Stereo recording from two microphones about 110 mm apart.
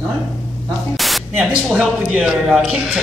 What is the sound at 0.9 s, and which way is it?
Static, centre (ahead or behind).